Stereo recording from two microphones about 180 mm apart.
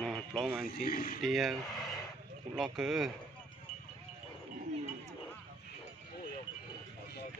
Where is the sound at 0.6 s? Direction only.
55° left (ahead or behind).